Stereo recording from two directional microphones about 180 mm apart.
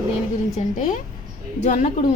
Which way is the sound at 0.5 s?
45° left (ahead or behind).